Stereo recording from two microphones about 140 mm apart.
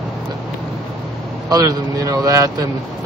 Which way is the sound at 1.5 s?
25° right (ahead or behind).